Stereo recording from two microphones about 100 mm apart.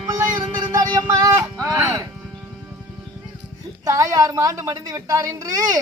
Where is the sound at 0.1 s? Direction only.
35° right (ahead or behind).